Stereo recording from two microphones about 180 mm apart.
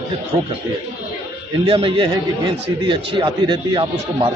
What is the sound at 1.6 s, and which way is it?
A man's voice, 30° right (ahead or behind).